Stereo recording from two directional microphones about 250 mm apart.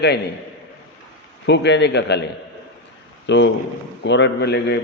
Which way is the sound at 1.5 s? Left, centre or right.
Left.